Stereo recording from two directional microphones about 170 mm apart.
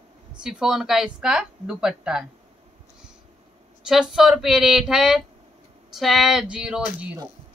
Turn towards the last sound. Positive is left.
turn(degrees=-5)  # may be behind; listen again after turning